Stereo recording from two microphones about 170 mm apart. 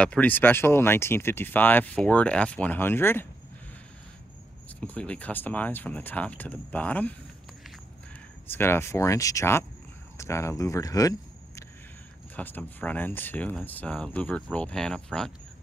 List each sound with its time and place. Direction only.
0.0 s speech: 5° left (ahead or behind)
4.7 s speech: 10° left (ahead or behind)
8.5 s speech: 15° left (ahead or behind)